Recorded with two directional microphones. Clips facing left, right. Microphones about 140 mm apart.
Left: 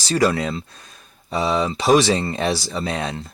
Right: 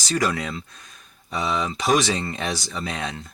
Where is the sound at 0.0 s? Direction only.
30° left (ahead or behind).